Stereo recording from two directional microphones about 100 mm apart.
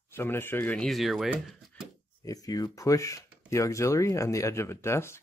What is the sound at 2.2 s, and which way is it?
Speech, 35° left (ahead or behind).